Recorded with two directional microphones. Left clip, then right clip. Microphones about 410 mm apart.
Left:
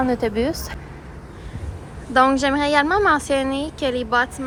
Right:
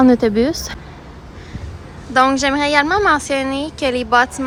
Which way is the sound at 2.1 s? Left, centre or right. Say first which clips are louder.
Right 2 dB; centre.